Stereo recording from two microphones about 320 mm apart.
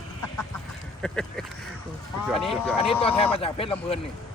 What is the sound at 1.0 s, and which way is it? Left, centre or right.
Speech, centre.